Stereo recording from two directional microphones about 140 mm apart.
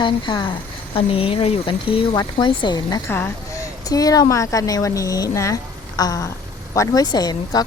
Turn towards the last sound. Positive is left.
turn(degrees=30)  # may be behind; listen again after turning